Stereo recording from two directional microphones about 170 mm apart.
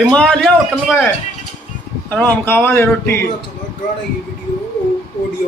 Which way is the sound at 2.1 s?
10° left (ahead or behind).